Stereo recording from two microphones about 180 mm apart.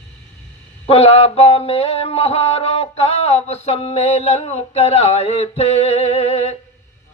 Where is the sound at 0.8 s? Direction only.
35° left (ahead or behind).